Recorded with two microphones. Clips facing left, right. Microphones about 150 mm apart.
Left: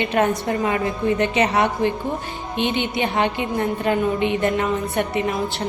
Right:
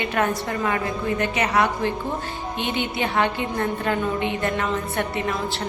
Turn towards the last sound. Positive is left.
turn(degrees=20)  # may be behind; listen again after turning